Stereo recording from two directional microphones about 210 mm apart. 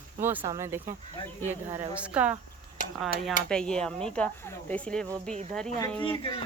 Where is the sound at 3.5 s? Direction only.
5° left (ahead or behind).